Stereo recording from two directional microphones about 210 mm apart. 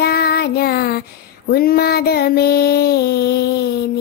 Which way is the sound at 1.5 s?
45° left (ahead or behind).